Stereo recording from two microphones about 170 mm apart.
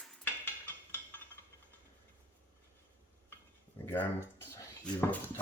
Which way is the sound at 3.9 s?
15° left (ahead or behind).